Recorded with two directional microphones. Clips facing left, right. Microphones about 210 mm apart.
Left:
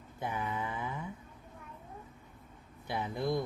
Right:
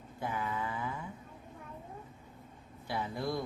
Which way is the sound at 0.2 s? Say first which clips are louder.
Even; 20° left (ahead or behind).